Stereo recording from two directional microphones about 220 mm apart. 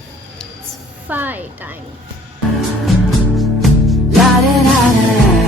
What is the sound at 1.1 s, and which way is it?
Speech, 10° right (ahead or behind).